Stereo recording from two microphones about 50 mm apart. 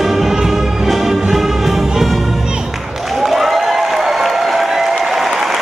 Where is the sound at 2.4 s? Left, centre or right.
Centre.